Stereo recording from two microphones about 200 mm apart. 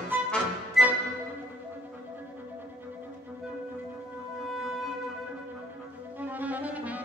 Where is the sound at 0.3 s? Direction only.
Centre (ahead or behind).